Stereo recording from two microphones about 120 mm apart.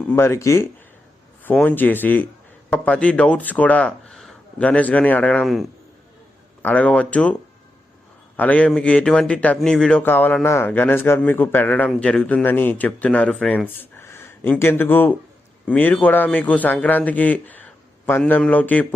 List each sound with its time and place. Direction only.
0.2 s a man's voice: 25° left (ahead or behind)
6.6 s a man's voice: 10° left (ahead or behind)
8.4 s a man's voice: 10° left (ahead or behind)
10.0 s a man's voice: 15° left (ahead or behind)
13.7 s a sound: 20° left (ahead or behind)
14.6 s a man's voice: 20° left (ahead or behind)